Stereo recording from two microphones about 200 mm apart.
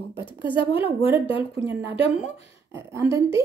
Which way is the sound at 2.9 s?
15° right (ahead or behind).